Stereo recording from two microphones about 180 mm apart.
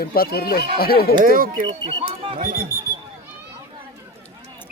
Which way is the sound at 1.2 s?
50° right (ahead or behind).